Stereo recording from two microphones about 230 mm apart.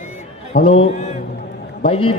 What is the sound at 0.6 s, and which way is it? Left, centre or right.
Speech, left.